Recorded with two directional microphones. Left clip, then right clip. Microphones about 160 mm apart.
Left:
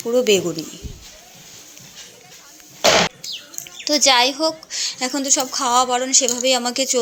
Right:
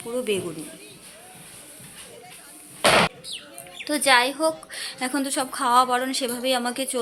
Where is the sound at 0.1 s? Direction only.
35° left (ahead or behind).